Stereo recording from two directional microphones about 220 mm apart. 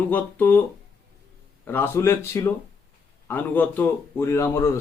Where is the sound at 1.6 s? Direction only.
10° left (ahead or behind).